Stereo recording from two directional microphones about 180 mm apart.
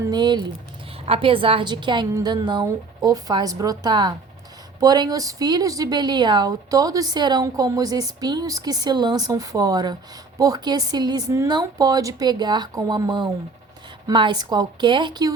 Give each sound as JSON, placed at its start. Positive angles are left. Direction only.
{"t": 0.0, "sound": "a woman's voice", "side_deg": -25}